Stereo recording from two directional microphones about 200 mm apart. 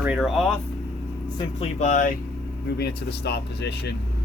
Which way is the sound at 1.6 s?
35° left (ahead or behind).